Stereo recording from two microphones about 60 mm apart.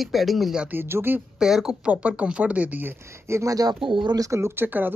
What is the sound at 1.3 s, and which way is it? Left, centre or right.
Speech, centre.